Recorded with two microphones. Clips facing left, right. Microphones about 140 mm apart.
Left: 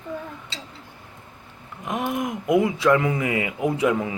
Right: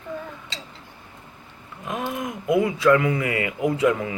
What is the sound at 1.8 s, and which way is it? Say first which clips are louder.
Speech: left 2 dB; 20° left (ahead or behind).